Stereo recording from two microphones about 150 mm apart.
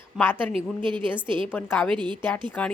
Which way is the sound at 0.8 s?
35° right (ahead or behind).